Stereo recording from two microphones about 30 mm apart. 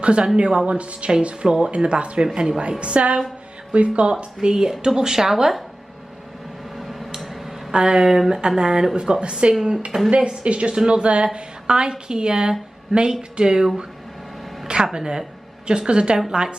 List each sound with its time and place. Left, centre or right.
0.0 s a woman's voice: right
2.3 s a woman's voice: right
2.8 s a woman's voice: right
4.4 s a woman's voice: right
6.8 s a sound: centre
7.7 s speech: right
8.0 s a woman's voice: centre
14.9 s speech: centre